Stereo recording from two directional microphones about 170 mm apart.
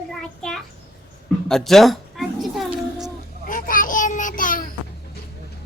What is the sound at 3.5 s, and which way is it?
Child singing, 50° left (ahead or behind).